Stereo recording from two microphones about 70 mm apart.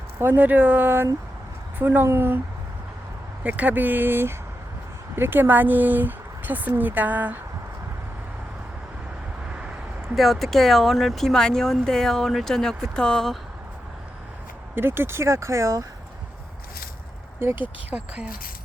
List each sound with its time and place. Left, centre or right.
0.2 s speech: right
3.4 s speech: right
10.2 s speech: centre
14.8 s speech: right
17.4 s speech: right
17.9 s speech: centre